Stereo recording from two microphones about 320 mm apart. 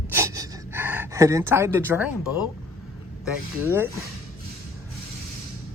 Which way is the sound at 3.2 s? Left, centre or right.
Centre.